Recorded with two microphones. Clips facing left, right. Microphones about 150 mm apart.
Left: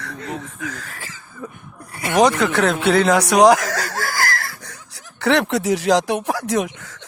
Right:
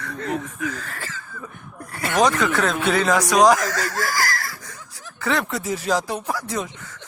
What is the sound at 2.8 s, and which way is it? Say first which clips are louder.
Speech: left 5 dB; 70° left (ahead or behind).